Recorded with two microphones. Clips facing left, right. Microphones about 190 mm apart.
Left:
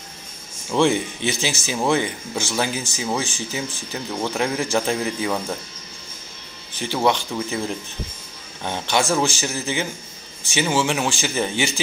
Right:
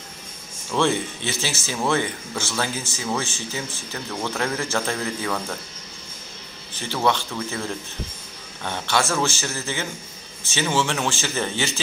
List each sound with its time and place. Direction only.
0.7 s speech: 15° left (ahead or behind)
6.8 s speech: 15° left (ahead or behind)